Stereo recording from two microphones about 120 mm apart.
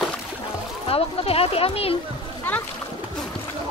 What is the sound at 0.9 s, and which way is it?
Speech, 55° left (ahead or behind).